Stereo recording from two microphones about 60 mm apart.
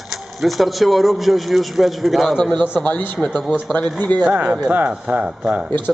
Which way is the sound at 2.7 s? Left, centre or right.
Left.